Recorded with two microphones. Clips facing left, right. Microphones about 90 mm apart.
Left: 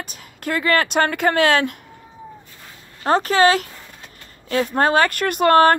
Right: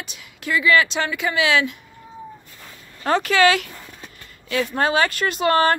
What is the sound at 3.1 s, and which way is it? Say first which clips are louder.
Speech: left 2 dB; 40° left (ahead or behind).